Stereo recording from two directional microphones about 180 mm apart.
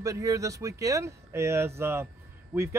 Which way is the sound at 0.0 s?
20° right (ahead or behind).